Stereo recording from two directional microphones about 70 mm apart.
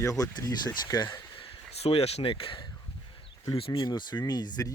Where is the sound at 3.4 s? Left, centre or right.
Left.